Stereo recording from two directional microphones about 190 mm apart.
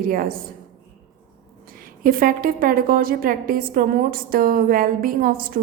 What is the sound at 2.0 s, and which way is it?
A woman's voice, 50° right (ahead or behind).